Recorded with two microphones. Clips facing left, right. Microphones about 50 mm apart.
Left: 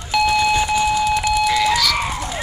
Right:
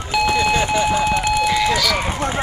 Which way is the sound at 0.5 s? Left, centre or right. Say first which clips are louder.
Even; right.